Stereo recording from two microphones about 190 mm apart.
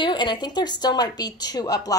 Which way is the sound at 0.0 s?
25° left (ahead or behind).